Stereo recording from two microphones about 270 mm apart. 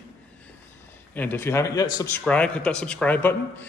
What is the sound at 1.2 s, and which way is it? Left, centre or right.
A man's voice, centre.